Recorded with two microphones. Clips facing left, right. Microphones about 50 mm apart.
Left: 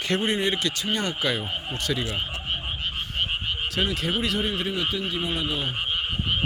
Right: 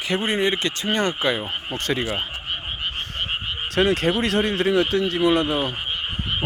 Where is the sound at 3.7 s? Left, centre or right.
Right.